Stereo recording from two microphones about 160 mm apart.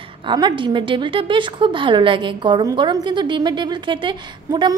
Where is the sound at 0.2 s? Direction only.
30° right (ahead or behind).